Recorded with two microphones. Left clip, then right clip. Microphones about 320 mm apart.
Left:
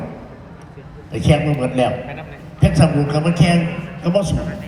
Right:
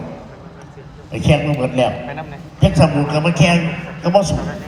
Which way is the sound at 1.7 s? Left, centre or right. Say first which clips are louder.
Right 1 dB; right.